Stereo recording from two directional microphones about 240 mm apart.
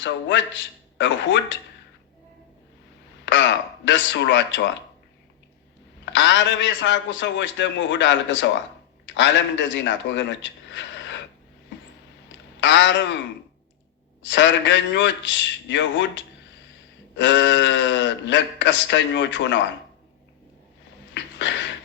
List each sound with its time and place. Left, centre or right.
0.0 s speech: left
3.2 s speech: left
6.1 s a man's voice: left
12.5 s speech: left
14.2 s speech: left
21.1 s a sound: left